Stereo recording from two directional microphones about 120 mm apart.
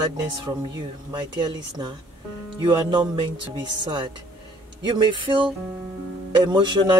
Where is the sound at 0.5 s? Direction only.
35° right (ahead or behind).